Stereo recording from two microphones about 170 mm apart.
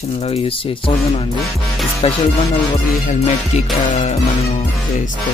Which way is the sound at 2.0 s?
35° left (ahead or behind).